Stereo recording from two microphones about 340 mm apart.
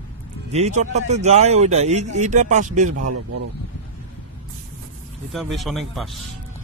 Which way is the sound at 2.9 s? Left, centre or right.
Right.